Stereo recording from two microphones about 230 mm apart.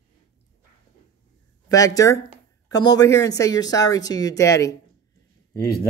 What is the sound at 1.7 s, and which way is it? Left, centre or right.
Speech, centre.